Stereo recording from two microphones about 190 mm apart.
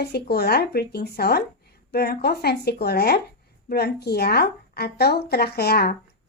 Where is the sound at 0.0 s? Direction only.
60° left (ahead or behind).